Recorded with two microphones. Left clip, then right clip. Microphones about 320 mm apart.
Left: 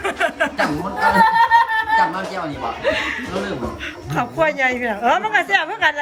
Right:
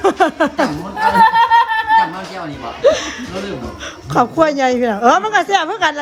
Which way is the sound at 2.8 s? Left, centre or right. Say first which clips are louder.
Right 8 dB; centre.